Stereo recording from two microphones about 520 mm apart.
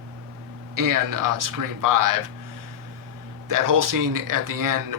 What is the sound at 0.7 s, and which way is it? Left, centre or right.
Speech, right.